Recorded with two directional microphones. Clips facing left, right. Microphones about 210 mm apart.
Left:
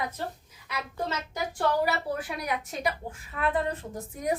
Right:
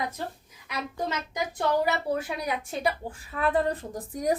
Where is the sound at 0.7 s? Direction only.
15° right (ahead or behind).